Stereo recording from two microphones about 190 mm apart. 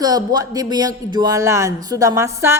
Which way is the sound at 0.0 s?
20° right (ahead or behind).